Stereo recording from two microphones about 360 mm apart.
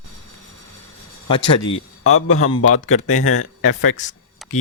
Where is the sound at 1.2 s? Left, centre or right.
Centre.